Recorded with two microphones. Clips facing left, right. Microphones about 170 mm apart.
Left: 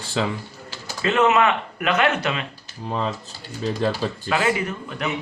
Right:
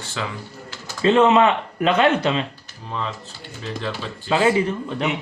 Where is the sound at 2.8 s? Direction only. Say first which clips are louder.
Left 3 dB; 40° left (ahead or behind).